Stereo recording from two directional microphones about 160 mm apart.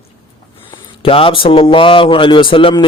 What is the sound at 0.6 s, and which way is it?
Speech, 35° left (ahead or behind).